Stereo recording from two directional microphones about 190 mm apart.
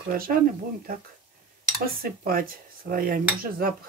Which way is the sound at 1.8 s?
50° right (ahead or behind).